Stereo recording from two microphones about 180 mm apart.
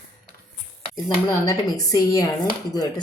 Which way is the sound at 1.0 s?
20° left (ahead or behind).